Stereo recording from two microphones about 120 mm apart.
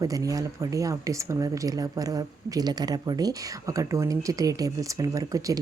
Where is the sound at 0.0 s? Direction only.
30° right (ahead or behind).